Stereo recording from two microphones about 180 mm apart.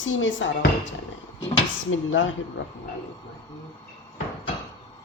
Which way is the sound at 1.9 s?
90° left.